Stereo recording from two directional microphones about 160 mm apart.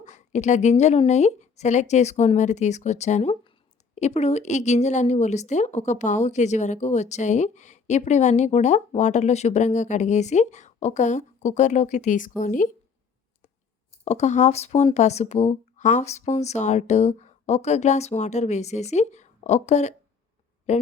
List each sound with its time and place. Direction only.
0.0 s a woman's voice: 50° left (ahead or behind)
14.0 s a woman's voice: 45° left (ahead or behind)